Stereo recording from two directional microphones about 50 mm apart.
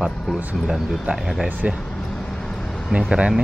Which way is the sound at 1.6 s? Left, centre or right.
Right.